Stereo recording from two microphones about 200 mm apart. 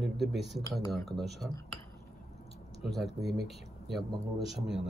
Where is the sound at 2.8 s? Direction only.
Centre (ahead or behind).